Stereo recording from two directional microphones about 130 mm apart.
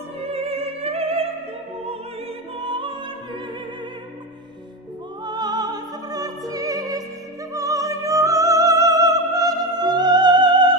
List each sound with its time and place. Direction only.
0.2 s music: 50° right (ahead or behind)
2.6 s music: 40° right (ahead or behind)
5.2 s music: 35° right (ahead or behind)